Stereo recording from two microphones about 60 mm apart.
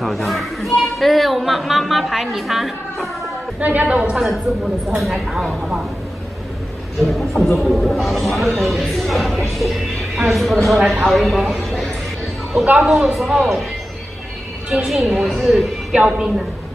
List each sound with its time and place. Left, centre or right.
0.0 s a woman's voice: centre
3.5 s a woman's voice: right
4.9 s a man's voice: centre
7.0 s a man's voice: centre
9.6 s a sound: centre
10.9 s a man's voice: centre
14.9 s a man's voice: centre
15.9 s a woman's voice: centre